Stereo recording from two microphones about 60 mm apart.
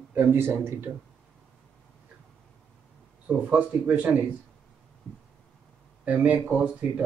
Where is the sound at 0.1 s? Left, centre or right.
Right.